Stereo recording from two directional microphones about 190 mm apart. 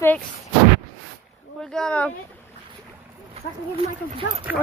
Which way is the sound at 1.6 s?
5° left (ahead or behind).